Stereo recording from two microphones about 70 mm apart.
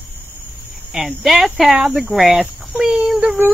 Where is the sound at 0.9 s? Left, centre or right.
Centre.